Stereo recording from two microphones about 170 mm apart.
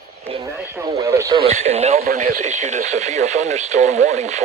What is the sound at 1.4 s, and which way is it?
Speech, 40° right (ahead or behind).